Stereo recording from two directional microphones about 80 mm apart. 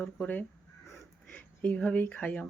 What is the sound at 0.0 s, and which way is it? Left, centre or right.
Speech, centre.